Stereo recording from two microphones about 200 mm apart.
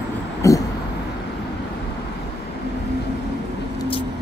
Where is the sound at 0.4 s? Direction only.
15° left (ahead or behind).